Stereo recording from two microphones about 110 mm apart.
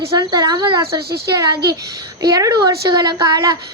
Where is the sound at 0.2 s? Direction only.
40° right (ahead or behind).